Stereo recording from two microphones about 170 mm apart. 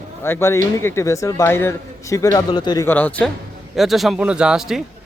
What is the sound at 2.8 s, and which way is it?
A man's voice, 10° left (ahead or behind).